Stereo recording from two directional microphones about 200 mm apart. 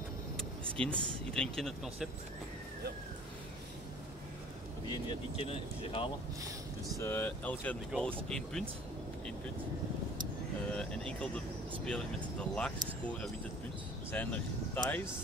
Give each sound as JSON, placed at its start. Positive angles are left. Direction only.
{"t": 0.7, "sound": "speech", "side_deg": 5}
{"t": 4.8, "sound": "speech", "side_deg": 25}
{"t": 7.0, "sound": "speech", "side_deg": 10}
{"t": 10.7, "sound": "speech", "side_deg": 5}